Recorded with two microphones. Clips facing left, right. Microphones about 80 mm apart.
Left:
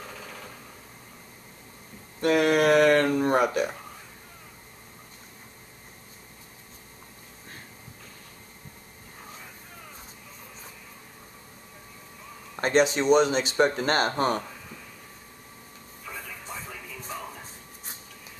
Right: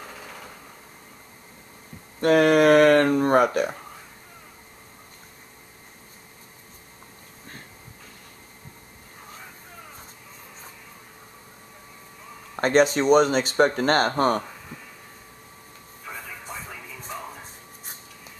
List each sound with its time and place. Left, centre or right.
0.0 s a sound: centre
2.1 s speech: right
12.5 s speech: right
16.5 s music: right